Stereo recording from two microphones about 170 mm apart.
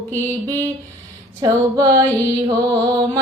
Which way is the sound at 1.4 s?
20° right (ahead or behind).